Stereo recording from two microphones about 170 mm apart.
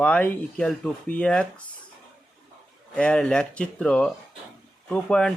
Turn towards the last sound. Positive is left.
turn(degrees=5)  # may be behind; listen again after turning